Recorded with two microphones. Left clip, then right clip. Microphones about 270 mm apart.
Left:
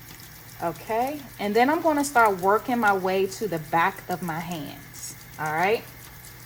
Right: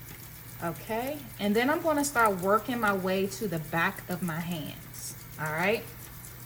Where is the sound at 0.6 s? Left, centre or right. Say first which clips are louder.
Left 7 dB; left.